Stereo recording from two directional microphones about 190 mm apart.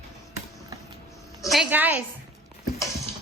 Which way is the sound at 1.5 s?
5° right (ahead or behind).